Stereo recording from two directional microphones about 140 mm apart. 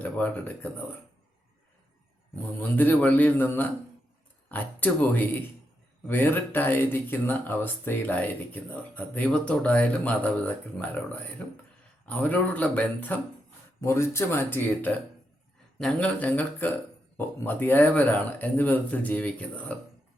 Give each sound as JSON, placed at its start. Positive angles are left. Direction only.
{"t": 0.0, "sound": "speech", "side_deg": 10}
{"t": 2.6, "sound": "speech", "side_deg": 10}